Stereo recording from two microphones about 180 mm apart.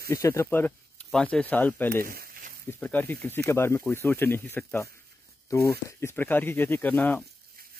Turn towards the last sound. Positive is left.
turn(degrees=10)  # may be behind; listen again after turning